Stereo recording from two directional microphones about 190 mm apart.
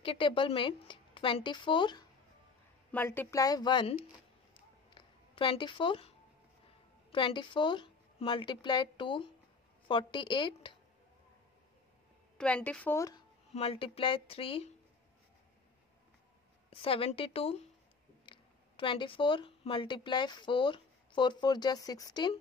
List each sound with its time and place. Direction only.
0.0 s a woman's voice: 30° left (ahead or behind)
2.9 s speech: 10° left (ahead or behind)
4.9 s a sound: 25° left (ahead or behind)
7.1 s a woman's voice: 25° left (ahead or behind)
12.4 s speech: 5° left (ahead or behind)
13.5 s a woman's voice: 30° left (ahead or behind)
16.7 s a woman's voice: 30° left (ahead or behind)